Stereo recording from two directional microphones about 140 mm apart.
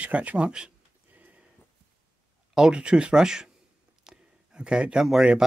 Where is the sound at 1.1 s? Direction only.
10° right (ahead or behind).